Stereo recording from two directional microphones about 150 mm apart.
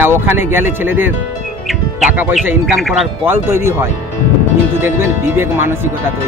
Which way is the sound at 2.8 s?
Centre (ahead or behind).